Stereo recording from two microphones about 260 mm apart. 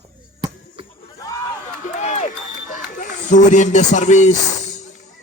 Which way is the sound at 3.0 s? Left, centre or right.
Left.